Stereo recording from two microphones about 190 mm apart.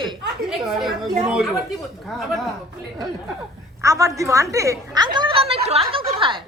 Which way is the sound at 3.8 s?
15° right (ahead or behind).